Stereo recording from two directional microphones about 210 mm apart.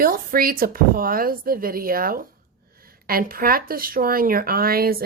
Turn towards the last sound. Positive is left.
turn(degrees=-45)  # may be behind; listen again after turning